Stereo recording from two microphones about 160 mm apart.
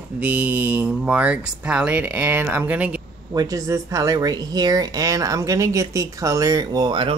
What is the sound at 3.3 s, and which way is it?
Speech, 20° right (ahead or behind).